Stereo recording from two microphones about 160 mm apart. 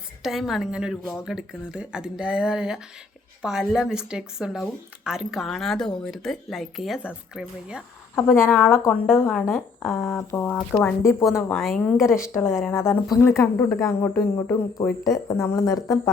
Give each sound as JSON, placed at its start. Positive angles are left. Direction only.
{"t": 0.2, "sound": "speech", "side_deg": 0}
{"t": 8.4, "sound": "speech", "side_deg": 10}
{"t": 11.0, "sound": "speech", "side_deg": 15}
{"t": 11.4, "sound": "speech", "side_deg": 0}
{"t": 12.3, "sound": "speech", "side_deg": 15}